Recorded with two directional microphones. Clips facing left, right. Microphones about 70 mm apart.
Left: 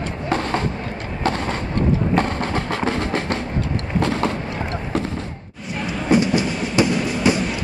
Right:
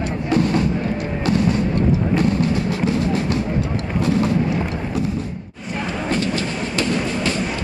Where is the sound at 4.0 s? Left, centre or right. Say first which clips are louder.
Right 2 dB; left.